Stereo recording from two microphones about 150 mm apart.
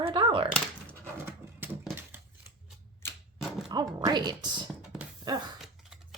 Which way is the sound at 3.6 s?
25° right (ahead or behind).